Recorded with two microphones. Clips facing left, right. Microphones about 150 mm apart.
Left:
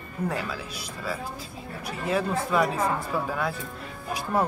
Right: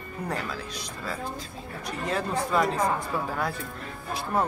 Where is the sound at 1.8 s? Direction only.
5° left (ahead or behind).